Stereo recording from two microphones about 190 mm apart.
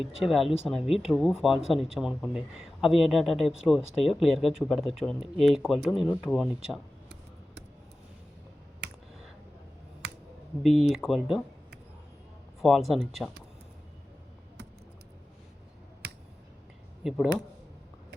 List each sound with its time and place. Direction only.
0.2 s speech: centre (ahead or behind)
0.8 s speech: 30° left (ahead or behind)
1.0 s speech: centre (ahead or behind)
10.6 s speech: centre (ahead or behind)
12.6 s speech: centre (ahead or behind)
17.0 s speech: centre (ahead or behind)